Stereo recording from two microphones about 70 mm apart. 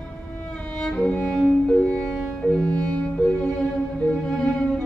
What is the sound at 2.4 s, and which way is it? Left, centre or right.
Violin, centre.